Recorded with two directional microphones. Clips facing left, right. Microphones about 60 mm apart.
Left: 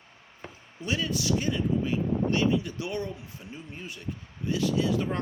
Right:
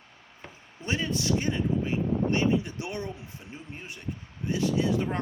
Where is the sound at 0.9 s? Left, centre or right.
Right.